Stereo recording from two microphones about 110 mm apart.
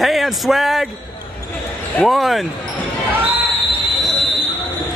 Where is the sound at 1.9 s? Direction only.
Centre (ahead or behind).